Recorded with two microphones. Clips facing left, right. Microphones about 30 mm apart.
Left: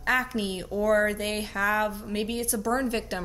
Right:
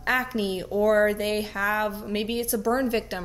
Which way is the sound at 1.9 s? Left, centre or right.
Centre.